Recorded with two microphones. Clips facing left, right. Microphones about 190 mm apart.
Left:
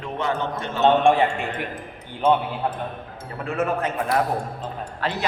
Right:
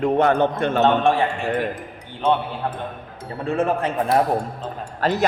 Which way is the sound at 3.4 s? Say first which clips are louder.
Right 3 dB; 30° right (ahead or behind).